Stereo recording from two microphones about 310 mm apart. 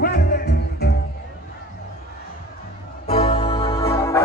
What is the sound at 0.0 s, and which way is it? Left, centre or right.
Music, left.